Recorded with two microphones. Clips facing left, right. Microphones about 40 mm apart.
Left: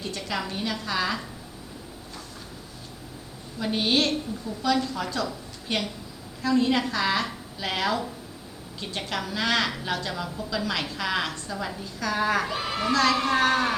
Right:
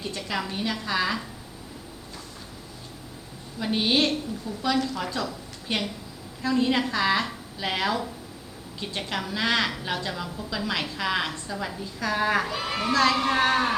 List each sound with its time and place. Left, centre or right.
0.0 s a woman's voice: centre
3.6 s a woman's voice: centre